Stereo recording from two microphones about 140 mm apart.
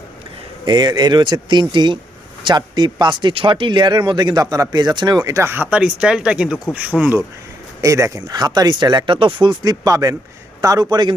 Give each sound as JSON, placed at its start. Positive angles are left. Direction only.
{"t": 0.6, "sound": "speech", "side_deg": -30}
{"t": 6.9, "sound": "speech", "side_deg": 5}
{"t": 7.8, "sound": "speech", "side_deg": -20}